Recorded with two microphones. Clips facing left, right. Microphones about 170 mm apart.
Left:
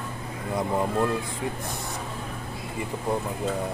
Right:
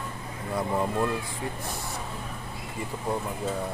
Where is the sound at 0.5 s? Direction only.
20° left (ahead or behind).